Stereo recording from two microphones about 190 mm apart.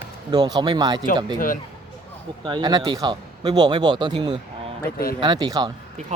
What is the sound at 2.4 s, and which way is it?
Speech, 25° right (ahead or behind).